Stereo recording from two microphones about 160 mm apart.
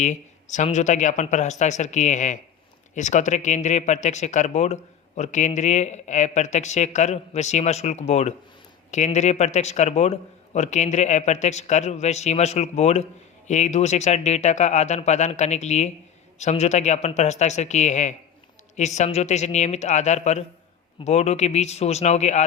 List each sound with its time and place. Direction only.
0.0 s speech: 50° left (ahead or behind)